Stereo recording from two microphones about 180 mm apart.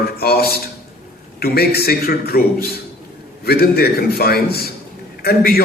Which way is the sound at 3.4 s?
60° left (ahead or behind).